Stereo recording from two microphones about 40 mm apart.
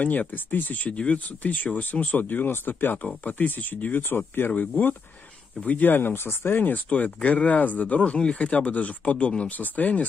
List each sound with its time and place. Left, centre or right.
0.0 s speech: left
0.5 s speech: left
0.8 s speech: left
3.3 s speech: left
5.9 s speech: left
6.6 s speech: left
8.0 s speech: left